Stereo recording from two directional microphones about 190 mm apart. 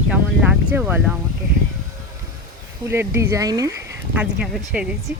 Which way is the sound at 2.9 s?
15° right (ahead or behind).